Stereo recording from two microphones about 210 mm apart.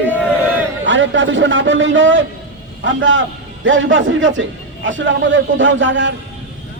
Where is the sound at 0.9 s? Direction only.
65° right (ahead or behind).